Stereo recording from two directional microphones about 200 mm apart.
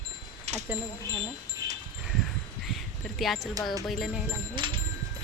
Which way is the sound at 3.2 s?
Centre (ahead or behind).